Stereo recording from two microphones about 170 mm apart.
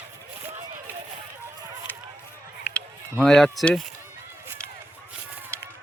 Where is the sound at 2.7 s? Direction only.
5° left (ahead or behind).